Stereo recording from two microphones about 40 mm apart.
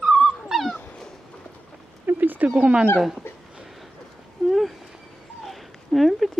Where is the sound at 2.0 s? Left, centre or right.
Right.